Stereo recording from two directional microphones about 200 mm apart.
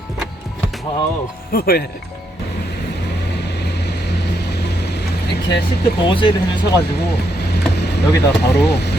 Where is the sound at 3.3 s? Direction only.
55° left (ahead or behind).